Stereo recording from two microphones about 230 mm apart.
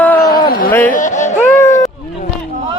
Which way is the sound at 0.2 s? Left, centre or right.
Left.